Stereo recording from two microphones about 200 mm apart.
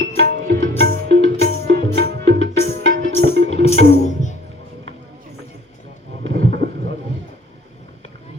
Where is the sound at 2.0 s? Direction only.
60° right (ahead or behind).